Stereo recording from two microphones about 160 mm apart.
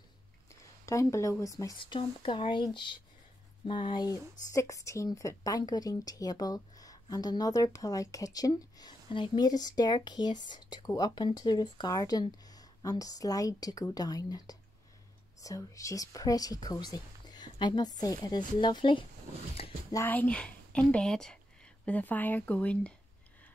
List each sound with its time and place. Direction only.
0.5 s speech: 20° left (ahead or behind)
19.9 s a woman's voice: 15° left (ahead or behind)